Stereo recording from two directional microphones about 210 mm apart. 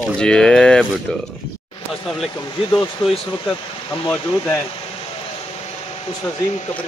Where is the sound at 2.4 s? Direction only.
20° left (ahead or behind).